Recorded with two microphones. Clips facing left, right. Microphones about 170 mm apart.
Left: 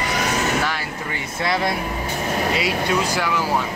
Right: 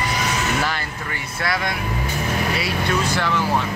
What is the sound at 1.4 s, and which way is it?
Speech, 25° left (ahead or behind).